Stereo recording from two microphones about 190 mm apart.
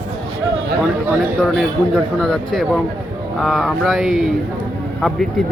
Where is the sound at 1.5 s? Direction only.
Centre (ahead or behind).